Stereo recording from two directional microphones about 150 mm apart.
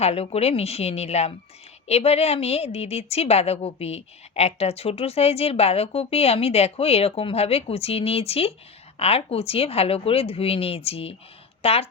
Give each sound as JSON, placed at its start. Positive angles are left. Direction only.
{"t": 0.0, "sound": "a woman's voice", "side_deg": 45}